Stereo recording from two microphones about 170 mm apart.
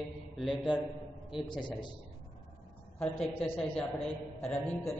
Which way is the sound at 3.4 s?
5° left (ahead or behind).